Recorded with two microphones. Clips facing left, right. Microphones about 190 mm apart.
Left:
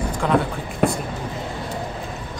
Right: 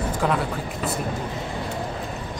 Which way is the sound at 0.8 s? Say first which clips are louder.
Left 10 dB; 60° left (ahead or behind).